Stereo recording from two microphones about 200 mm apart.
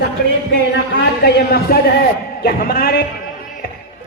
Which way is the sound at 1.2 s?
50° left (ahead or behind).